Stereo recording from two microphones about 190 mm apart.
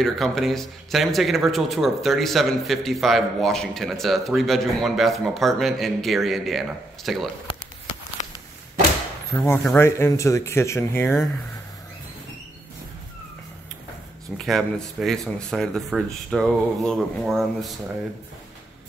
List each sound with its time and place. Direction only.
0.0 s speech: centre (ahead or behind)
8.2 s a sound: 40° left (ahead or behind)
9.4 s speech: 5° left (ahead or behind)
14.3 s speech: centre (ahead or behind)